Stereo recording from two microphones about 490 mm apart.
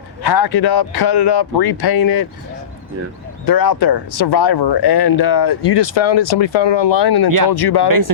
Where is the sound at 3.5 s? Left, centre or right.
Left.